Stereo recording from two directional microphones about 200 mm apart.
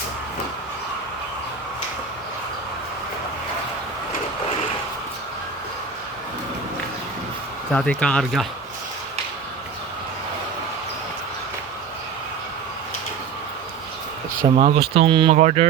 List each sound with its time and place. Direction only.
7.7 s speech: 5° left (ahead or behind)
14.5 s speech: 30° right (ahead or behind)